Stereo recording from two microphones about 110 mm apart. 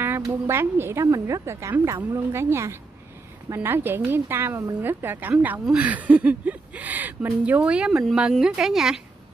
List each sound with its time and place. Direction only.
0.5 s a woman's voice: 20° right (ahead or behind); by 9.0 s 5° right (ahead or behind)